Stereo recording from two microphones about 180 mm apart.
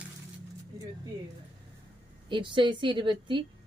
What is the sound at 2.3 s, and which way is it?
A woman's voice, 25° right (ahead or behind).